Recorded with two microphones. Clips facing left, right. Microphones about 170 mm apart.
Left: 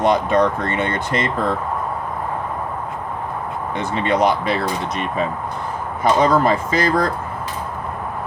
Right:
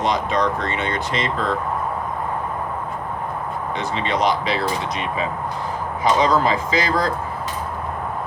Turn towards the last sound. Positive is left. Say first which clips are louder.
# left 2 dB
turn(degrees=55)  # may be behind; listen again after turning